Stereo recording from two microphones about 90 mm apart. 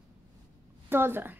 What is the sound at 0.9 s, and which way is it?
Speech, 25° right (ahead or behind).